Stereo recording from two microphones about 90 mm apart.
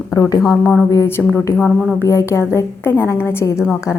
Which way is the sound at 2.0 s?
30° left (ahead or behind).